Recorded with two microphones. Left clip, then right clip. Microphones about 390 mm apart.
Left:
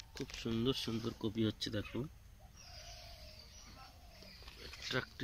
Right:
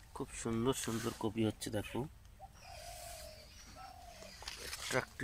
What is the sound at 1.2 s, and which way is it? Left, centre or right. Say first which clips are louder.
Speech: right 1 dB; right.